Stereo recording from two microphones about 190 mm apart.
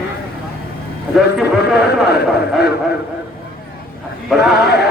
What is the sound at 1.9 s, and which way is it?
Speech, 55° left (ahead or behind).